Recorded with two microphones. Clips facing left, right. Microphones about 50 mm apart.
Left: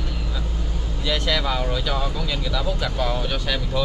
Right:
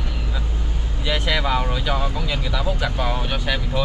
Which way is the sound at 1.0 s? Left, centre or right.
Centre.